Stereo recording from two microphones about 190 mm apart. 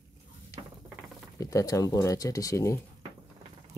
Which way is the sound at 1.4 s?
15° left (ahead or behind).